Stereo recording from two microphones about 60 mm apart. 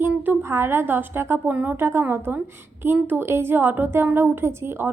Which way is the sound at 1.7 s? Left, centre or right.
Right.